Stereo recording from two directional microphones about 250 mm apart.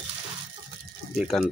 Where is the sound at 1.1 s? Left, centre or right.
Centre.